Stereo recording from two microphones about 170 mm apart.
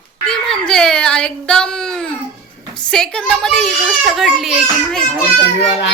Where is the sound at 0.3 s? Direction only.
5° left (ahead or behind).